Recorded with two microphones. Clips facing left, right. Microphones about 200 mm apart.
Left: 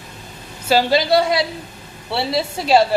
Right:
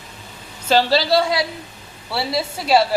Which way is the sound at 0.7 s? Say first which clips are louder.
Left 1 dB; 15° left (ahead or behind).